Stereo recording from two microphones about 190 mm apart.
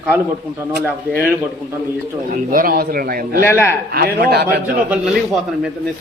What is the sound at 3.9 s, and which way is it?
Speech, 55° right (ahead or behind).